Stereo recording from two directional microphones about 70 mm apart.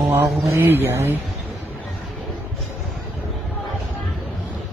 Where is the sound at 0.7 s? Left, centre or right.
Right.